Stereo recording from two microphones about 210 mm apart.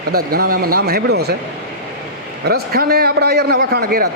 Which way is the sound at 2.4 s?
45° right (ahead or behind).